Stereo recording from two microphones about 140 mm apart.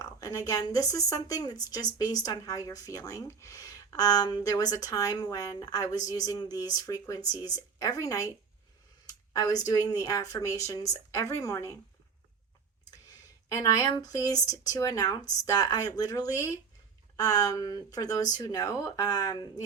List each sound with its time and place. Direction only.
0.0 s a woman's voice: 25° left (ahead or behind)
13.1 s a woman's voice: 25° left (ahead or behind)